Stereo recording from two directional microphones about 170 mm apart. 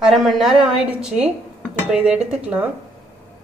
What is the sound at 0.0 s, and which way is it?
A woman's voice, centre (ahead or behind).